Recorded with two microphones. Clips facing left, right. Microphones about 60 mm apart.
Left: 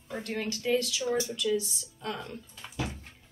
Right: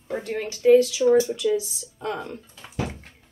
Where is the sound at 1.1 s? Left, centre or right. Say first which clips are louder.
Right 11 dB; right.